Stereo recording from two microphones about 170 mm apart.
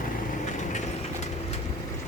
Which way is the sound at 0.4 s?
45° left (ahead or behind).